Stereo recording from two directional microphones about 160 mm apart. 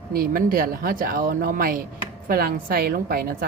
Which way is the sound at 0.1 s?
65° right (ahead or behind).